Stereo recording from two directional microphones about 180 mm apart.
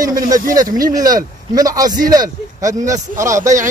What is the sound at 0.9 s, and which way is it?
Speech, 20° right (ahead or behind).